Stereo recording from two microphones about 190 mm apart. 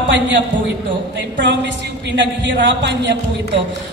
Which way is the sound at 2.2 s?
70° right (ahead or behind).